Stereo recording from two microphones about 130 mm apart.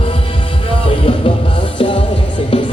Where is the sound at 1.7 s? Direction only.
40° left (ahead or behind).